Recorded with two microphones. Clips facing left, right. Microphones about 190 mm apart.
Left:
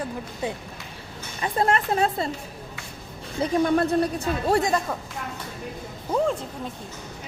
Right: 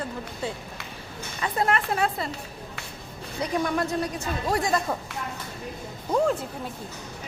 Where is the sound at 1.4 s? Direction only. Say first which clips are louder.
Left 2 dB; 25° left (ahead or behind).